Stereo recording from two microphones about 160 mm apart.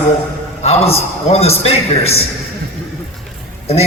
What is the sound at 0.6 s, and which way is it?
A man's voice, 40° left (ahead or behind).